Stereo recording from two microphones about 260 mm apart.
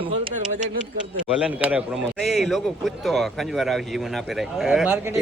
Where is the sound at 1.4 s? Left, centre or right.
Centre.